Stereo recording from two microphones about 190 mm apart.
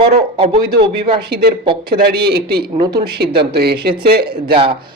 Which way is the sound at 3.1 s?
60° right (ahead or behind).